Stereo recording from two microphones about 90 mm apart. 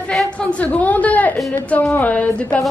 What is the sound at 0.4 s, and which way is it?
A woman's voice, 15° left (ahead or behind).